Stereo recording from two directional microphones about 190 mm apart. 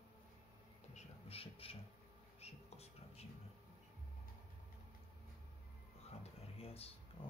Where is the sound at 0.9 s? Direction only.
30° left (ahead or behind).